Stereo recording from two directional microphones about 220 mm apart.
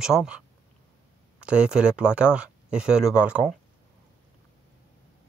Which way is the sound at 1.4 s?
5° right (ahead or behind).